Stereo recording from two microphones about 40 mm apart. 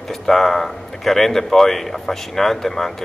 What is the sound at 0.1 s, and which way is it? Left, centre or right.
Speech, centre.